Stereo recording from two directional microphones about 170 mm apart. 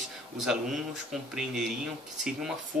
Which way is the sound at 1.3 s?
Centre (ahead or behind).